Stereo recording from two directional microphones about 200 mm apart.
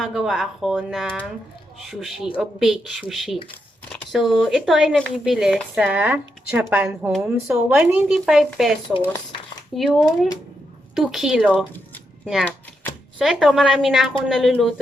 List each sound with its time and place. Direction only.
0.0 s speech: centre (ahead or behind)